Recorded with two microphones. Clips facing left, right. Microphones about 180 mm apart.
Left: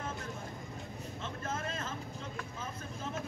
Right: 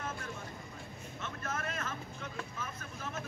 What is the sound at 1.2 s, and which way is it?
Vehicle, 30° left (ahead or behind).